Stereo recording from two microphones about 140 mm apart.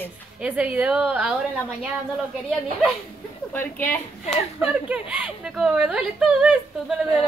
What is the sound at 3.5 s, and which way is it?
Speech, 15° left (ahead or behind).